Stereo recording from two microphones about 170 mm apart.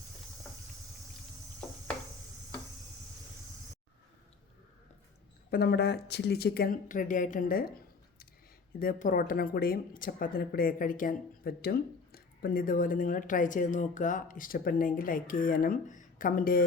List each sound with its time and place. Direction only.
5.5 s speech: 65° left (ahead or behind)
8.8 s speech: 55° left (ahead or behind)